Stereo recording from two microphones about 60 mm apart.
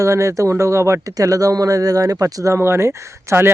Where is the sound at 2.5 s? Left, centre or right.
Right.